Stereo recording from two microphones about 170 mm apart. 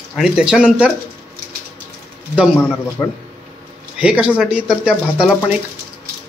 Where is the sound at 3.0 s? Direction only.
10° left (ahead or behind).